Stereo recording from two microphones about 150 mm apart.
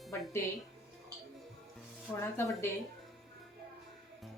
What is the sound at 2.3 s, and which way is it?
Speech, 15° left (ahead or behind).